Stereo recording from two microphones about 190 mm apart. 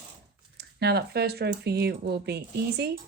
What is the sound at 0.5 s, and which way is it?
Speech, 60° right (ahead or behind).